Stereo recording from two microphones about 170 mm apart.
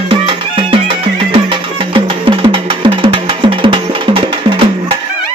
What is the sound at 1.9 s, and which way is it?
Music, 30° right (ahead or behind).